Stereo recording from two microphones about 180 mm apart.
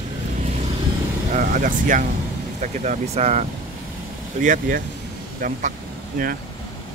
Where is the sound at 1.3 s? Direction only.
45° right (ahead or behind).